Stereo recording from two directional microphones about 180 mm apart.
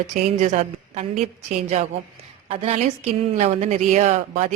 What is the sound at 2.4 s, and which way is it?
A woman's voice, 35° right (ahead or behind).